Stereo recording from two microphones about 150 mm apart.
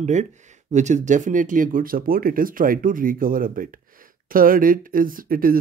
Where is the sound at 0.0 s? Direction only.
50° right (ahead or behind).